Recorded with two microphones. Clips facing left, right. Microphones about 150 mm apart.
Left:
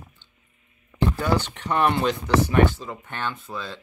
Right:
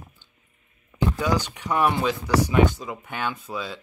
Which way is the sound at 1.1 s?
10° right (ahead or behind).